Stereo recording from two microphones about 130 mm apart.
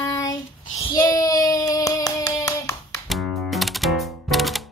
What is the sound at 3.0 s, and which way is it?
Music, centre (ahead or behind).